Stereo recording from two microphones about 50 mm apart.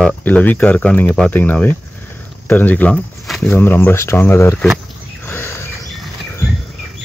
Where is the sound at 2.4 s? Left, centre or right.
Left.